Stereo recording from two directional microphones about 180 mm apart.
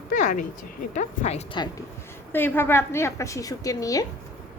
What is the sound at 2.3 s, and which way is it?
A woman's voice, 10° left (ahead or behind).